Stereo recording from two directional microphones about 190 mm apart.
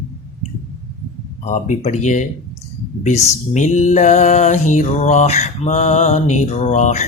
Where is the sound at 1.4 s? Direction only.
40° left (ahead or behind).